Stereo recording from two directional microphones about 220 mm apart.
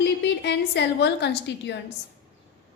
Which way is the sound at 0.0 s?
50° left (ahead or behind).